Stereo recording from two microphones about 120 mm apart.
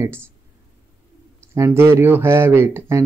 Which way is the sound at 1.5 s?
20° right (ahead or behind).